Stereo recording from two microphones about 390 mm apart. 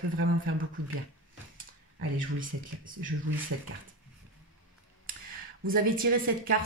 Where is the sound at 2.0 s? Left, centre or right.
Right.